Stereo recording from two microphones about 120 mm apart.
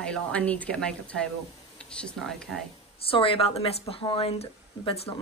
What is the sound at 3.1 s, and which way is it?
A woman's voice, 50° left (ahead or behind).